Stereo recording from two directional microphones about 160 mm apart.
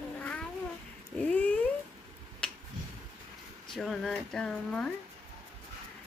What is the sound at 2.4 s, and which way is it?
Finger snapping, 5° left (ahead or behind).